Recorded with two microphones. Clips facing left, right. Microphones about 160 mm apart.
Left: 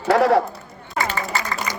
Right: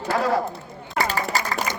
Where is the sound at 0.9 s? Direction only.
40° right (ahead or behind).